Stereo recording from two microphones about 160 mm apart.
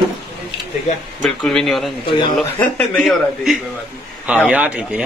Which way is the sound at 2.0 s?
30° left (ahead or behind).